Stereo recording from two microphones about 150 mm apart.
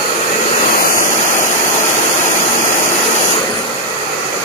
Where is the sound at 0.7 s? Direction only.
70° left (ahead or behind).